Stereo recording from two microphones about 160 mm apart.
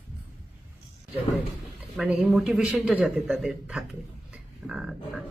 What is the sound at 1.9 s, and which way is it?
Speech, 5° right (ahead or behind).